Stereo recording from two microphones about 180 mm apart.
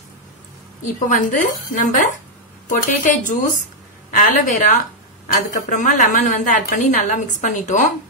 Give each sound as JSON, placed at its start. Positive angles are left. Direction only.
{"t": 1.0, "sound": "a woman's voice", "side_deg": 45}